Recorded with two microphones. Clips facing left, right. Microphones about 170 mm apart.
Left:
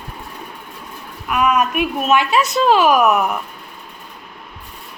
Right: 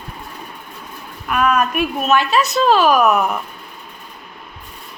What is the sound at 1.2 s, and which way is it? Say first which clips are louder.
A woman's voice: even; 15° left (ahead or behind).